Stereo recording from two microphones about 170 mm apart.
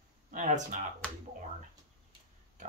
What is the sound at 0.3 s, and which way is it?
Speech, 50° right (ahead or behind).